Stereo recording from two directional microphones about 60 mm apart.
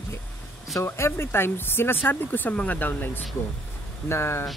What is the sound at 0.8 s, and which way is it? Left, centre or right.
Speech, left.